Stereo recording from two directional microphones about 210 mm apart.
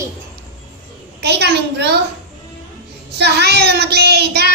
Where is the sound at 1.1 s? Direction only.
50° right (ahead or behind).